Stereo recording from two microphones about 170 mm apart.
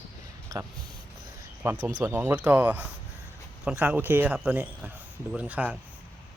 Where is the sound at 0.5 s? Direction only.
20° right (ahead or behind).